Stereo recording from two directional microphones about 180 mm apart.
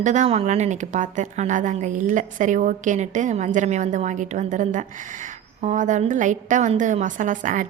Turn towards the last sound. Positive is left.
turn(degrees=-45)  # may be behind; listen again after turning